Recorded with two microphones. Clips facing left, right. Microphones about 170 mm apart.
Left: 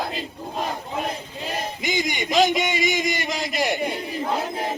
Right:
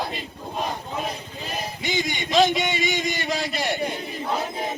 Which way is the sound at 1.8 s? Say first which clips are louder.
Left 1 dB; 15° left (ahead or behind).